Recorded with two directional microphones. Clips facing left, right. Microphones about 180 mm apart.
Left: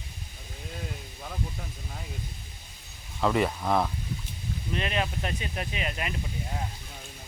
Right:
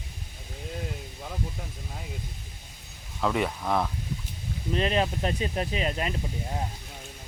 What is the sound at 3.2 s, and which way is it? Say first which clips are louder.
Speech: left 2 dB; centre (ahead or behind).